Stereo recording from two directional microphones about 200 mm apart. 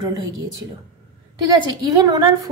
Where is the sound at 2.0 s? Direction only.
20° right (ahead or behind).